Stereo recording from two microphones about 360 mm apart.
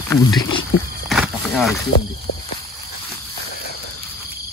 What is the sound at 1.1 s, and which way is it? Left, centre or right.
Speech, centre.